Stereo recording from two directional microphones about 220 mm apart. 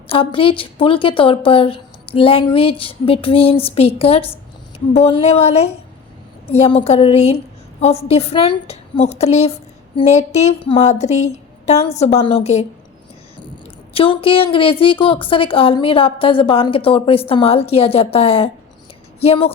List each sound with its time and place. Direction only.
0.1 s a woman's voice: 25° left (ahead or behind)
13.9 s a woman's voice: 25° left (ahead or behind)